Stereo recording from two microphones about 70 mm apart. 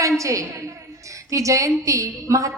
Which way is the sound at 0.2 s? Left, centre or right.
Right.